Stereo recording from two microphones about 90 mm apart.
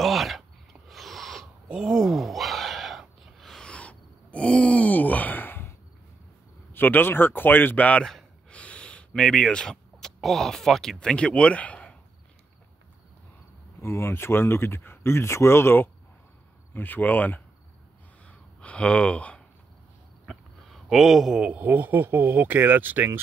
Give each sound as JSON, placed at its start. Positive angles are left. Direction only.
{"t": 0.0, "sound": "a sound", "side_deg": 0}
{"t": 6.7, "sound": "speech", "side_deg": 20}
{"t": 8.1, "sound": "gasp", "side_deg": 5}
{"t": 8.5, "sound": "speech", "side_deg": 15}
{"t": 13.7, "sound": "speech", "side_deg": 30}
{"t": 18.2, "sound": "a sound", "side_deg": 15}
{"t": 20.2, "sound": "a man's voice", "side_deg": 0}